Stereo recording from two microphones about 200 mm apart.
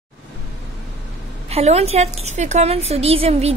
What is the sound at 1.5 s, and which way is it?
A woman's voice, 30° right (ahead or behind).